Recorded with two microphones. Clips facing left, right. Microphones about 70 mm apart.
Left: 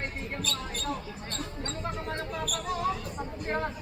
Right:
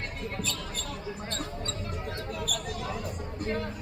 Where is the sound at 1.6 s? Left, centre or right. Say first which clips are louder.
Left 2 dB; left.